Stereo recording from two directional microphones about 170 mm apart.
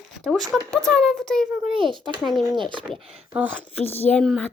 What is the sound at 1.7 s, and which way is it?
A child's voice, 30° right (ahead or behind).